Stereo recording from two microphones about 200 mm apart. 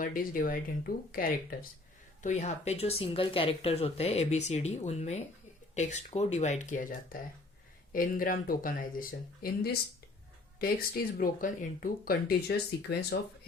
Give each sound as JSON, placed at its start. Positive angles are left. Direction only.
{"t": 0.0, "sound": "speech", "side_deg": 45}